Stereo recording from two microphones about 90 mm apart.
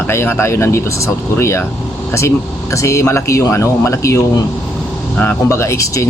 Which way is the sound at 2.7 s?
35° left (ahead or behind).